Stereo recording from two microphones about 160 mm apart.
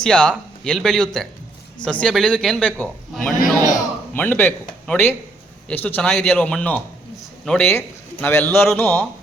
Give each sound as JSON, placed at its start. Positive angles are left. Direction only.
{"t": 0.0, "sound": "a man's voice", "side_deg": 5}
{"t": 3.7, "sound": "a sound", "side_deg": 10}
{"t": 5.6, "sound": "a man's voice", "side_deg": 10}